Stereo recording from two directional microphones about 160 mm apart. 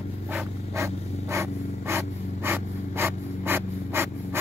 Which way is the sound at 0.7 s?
20° right (ahead or behind).